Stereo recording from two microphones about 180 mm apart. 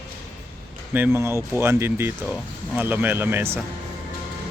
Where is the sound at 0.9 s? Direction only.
10° right (ahead or behind).